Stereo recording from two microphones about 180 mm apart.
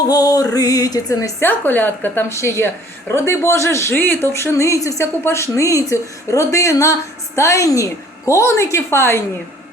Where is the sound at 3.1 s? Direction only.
15° left (ahead or behind).